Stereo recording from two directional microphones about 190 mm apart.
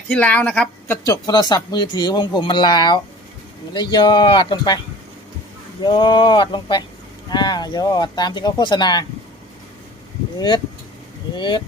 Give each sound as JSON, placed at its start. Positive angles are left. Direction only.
{"t": 0.1, "sound": "a woman's voice", "side_deg": 5}
{"t": 1.0, "sound": "speech", "side_deg": 20}
{"t": 5.8, "sound": "speech", "side_deg": 25}
{"t": 11.3, "sound": "speech", "side_deg": 25}